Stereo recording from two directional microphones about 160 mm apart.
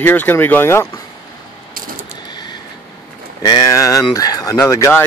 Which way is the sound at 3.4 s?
25° left (ahead or behind).